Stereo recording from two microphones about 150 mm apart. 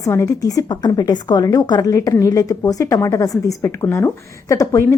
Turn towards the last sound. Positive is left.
turn(degrees=20)  # may be behind; listen again after turning